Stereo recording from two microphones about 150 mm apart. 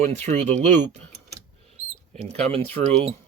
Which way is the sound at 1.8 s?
50° right (ahead or behind).